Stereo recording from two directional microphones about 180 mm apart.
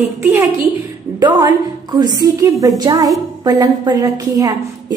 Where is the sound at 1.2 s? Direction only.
25° right (ahead or behind).